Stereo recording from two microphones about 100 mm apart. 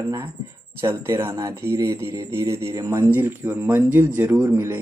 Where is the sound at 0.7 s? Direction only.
25° right (ahead or behind).